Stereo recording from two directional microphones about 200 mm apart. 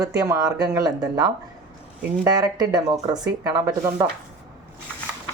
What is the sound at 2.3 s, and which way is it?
Speech, 20° right (ahead or behind).